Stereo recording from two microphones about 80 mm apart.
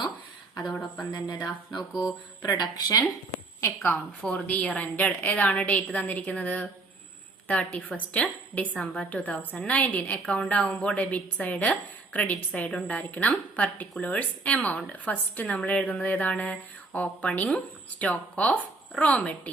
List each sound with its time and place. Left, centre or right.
0.7 s speech: centre
1.1 s a sound: left
1.9 s mantra: centre
2.4 s speech: left
4.2 s a woman's voice: centre